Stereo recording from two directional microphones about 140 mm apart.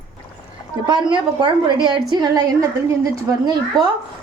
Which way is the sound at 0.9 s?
35° right (ahead or behind).